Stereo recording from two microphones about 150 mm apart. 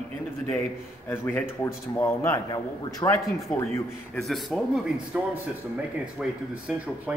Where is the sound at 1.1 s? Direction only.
15° left (ahead or behind).